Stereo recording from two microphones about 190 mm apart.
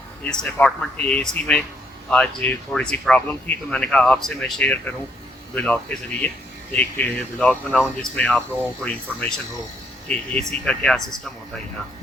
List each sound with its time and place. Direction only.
0.3 s speech: 5° left (ahead or behind)